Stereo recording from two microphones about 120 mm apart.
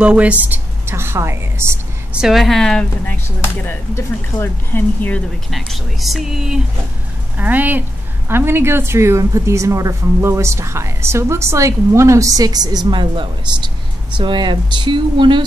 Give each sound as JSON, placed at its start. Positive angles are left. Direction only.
{"t": 0.0, "sound": "a woman's voice", "side_deg": -10}
{"t": 2.1, "sound": "speech", "side_deg": -5}
{"t": 5.5, "sound": "a woman's voice", "side_deg": 0}